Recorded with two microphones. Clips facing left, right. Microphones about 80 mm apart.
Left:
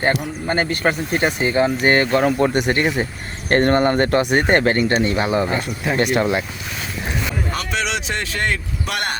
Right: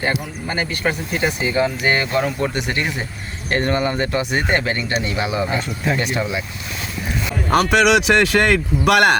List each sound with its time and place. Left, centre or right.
0.4 s speech: left
5.5 s speech: centre
6.0 s speech: left
7.5 s speech: right